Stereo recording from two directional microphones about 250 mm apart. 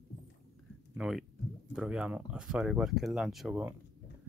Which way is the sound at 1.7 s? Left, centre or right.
Centre.